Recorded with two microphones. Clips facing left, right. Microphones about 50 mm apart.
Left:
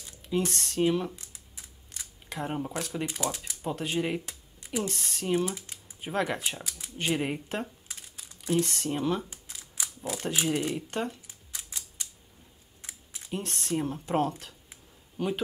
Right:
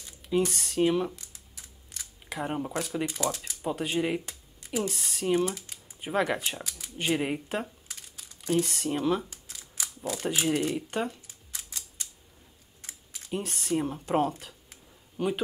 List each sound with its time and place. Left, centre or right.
0.0 s a sound: centre
0.5 s speech: centre
1.1 s a sound: left
2.2 s speech: centre
3.1 s speech: left
3.6 s speech: centre
9.3 s camera: left
10.2 s speech: centre
11.2 s camera: centre
12.8 s a sound: left
13.3 s a man's voice: centre